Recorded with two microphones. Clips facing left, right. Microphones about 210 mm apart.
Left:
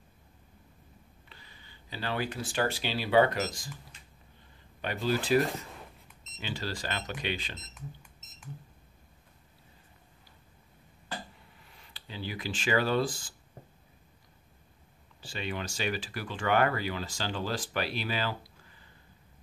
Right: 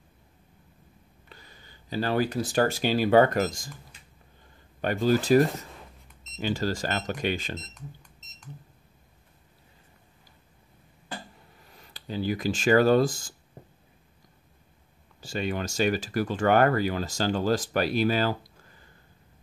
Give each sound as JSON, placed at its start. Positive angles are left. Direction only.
{"t": 1.3, "sound": "speech", "side_deg": -45}
{"t": 4.8, "sound": "speech", "side_deg": -45}
{"t": 11.6, "sound": "speech", "side_deg": -40}
{"t": 15.1, "sound": "speech", "side_deg": -45}